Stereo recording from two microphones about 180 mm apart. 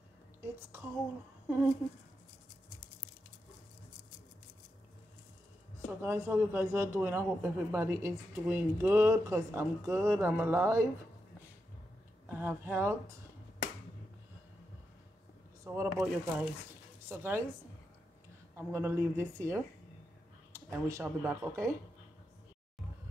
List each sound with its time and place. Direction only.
0.4 s whispering: 10° right (ahead or behind)
5.9 s a man's voice: 15° right (ahead or behind)
12.3 s a man's voice: 10° right (ahead or behind)
15.6 s a man's voice: 15° right (ahead or behind)
18.6 s a man's voice: 10° right (ahead or behind)